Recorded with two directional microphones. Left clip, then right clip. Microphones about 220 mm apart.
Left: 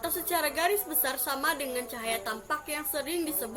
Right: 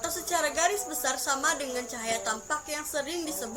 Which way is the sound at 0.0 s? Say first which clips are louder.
Right 1 dB; 5° left (ahead or behind).